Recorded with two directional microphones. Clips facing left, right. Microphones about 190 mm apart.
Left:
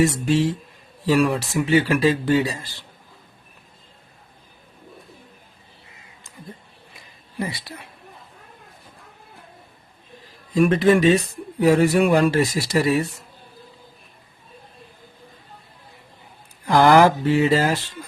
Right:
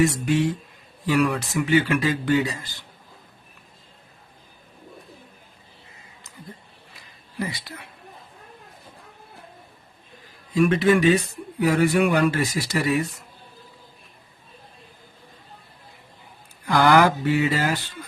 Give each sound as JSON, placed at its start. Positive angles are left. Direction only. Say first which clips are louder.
{"t": 0.0, "sound": "a man's voice", "louder": "left 2 dB", "side_deg": 30}
{"t": 10.5, "sound": "speech", "louder": "left 2 dB", "side_deg": 35}
{"t": 16.6, "sound": "speech", "louder": "left 3 dB", "side_deg": 30}